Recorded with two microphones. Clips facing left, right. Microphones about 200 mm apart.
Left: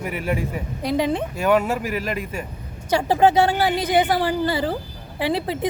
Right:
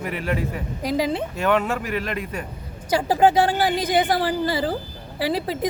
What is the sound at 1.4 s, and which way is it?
Speech, 5° left (ahead or behind).